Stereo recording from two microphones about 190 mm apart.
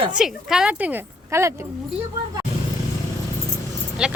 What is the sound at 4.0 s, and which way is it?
Speech, 5° right (ahead or behind).